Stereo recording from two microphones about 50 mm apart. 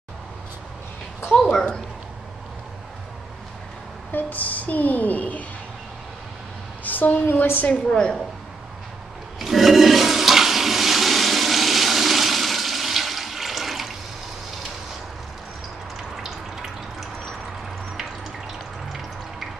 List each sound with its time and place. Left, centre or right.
1.3 s speech: centre
4.1 s speech: left
6.8 s a woman's voice: left
7.9 s speech: centre
9.4 s toilet flush: centre
16.2 s water: centre
18.9 s water: centre